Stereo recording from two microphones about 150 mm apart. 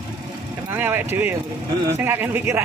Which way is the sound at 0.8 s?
15° right (ahead or behind).